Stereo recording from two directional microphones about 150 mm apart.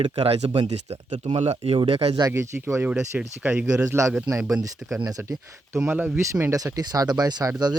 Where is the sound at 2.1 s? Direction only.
20° right (ahead or behind).